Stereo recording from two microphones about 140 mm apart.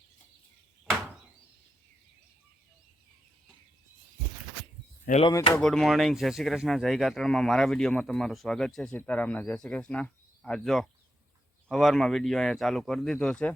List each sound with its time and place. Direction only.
5.1 s speech: 80° left
5.5 s speech: 5° left (ahead or behind)